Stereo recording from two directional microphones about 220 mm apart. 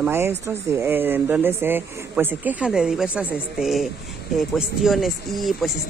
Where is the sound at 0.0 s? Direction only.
10° right (ahead or behind).